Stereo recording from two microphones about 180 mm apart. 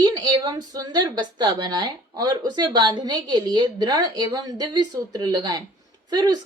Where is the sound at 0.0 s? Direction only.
20° right (ahead or behind).